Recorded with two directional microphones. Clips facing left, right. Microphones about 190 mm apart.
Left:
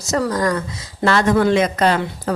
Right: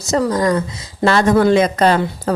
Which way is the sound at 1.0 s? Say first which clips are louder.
Right 3 dB; 35° right (ahead or behind).